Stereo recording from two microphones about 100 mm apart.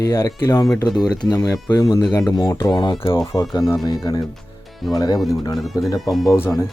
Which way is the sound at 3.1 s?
30° left (ahead or behind).